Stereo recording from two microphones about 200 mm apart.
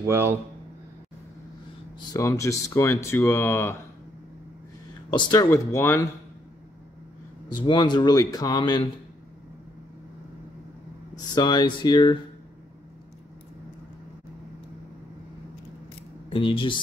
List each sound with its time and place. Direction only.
0.0 s speech: 15° right (ahead or behind)
2.0 s speech: 15° left (ahead or behind)
5.1 s speech: 20° left (ahead or behind)
7.6 s speech: 25° left (ahead or behind)
11.3 s speech: 20° left (ahead or behind)
16.3 s speech: 25° left (ahead or behind)